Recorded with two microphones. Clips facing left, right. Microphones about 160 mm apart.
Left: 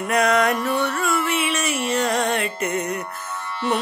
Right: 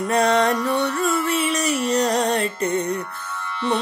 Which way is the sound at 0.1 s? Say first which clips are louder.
Even; 30° right (ahead or behind).